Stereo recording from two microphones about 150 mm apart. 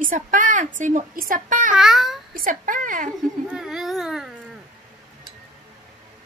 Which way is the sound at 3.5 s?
5° right (ahead or behind).